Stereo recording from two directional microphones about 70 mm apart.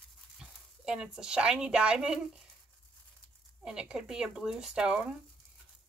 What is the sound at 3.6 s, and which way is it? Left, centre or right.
Speech, centre.